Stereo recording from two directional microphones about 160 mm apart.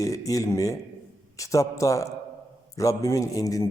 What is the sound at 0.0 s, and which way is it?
A man's voice, 20° left (ahead or behind).